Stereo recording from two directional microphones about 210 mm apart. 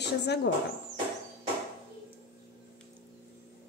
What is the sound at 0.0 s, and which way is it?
Speech, 55° left (ahead or behind).